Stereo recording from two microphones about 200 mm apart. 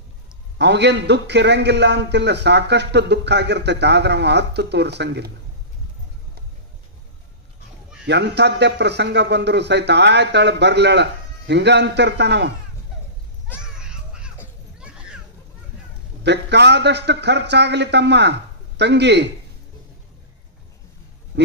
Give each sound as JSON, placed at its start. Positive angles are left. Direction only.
{"t": 0.6, "sound": "a man's voice", "side_deg": -60}
{"t": 8.1, "sound": "a man's voice", "side_deg": -60}
{"t": 13.6, "sound": "children playing", "side_deg": -5}
{"t": 14.8, "sound": "a sound", "side_deg": -5}
{"t": 16.2, "sound": "a man's voice", "side_deg": -55}